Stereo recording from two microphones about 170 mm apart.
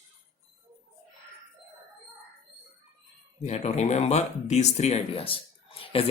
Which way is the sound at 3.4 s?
40° left (ahead or behind).